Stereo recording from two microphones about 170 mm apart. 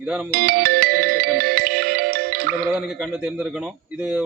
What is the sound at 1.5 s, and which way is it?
Music, 65° right (ahead or behind).